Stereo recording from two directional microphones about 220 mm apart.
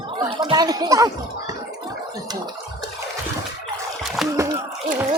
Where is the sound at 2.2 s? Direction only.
20° right (ahead or behind).